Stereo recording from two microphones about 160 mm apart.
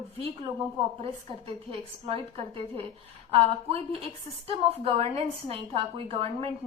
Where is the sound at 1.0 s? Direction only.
35° right (ahead or behind).